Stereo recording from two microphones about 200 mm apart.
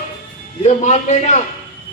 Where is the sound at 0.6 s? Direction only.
35° left (ahead or behind).